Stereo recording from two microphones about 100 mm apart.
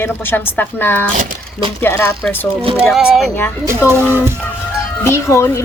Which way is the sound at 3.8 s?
25° left (ahead or behind).